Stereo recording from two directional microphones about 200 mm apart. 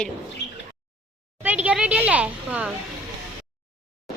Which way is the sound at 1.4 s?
5° right (ahead or behind).